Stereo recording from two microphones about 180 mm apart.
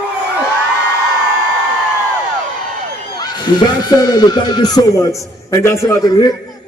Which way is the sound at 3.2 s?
25° left (ahead or behind).